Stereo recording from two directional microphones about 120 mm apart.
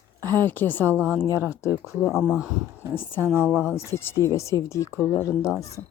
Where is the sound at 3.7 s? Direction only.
25° left (ahead or behind).